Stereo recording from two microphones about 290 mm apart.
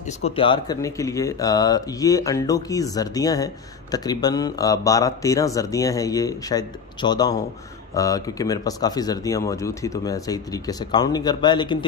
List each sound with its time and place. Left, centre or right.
0.2 s speech: centre